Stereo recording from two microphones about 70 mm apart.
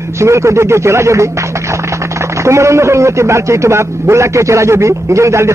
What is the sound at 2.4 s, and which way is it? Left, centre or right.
A man's voice, right.